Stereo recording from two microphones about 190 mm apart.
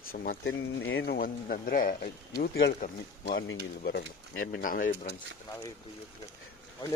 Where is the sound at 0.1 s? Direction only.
50° left (ahead or behind).